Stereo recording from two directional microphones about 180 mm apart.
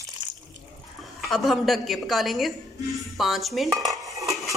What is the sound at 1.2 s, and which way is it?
Speech, centre (ahead or behind).